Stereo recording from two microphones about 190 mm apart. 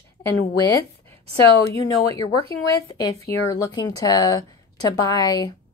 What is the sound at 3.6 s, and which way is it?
A woman's voice, 20° left (ahead or behind).